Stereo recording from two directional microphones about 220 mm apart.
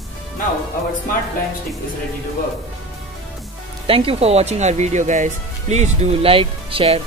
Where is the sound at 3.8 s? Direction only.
25° right (ahead or behind).